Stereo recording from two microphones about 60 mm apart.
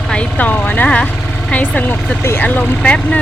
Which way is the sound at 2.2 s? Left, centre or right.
Left.